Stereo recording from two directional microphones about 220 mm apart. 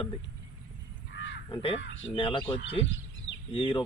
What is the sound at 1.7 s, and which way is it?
Speech, 55° left (ahead or behind).